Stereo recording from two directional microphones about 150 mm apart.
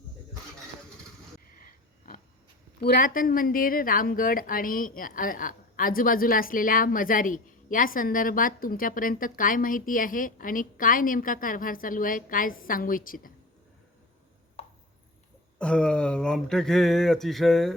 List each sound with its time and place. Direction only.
1.6 s sniff: 75° left (ahead or behind)
2.8 s speech: 80° left
15.5 s speech: 5° left (ahead or behind)